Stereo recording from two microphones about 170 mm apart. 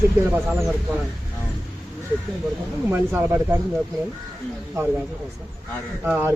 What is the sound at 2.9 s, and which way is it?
Speech, 10° right (ahead or behind).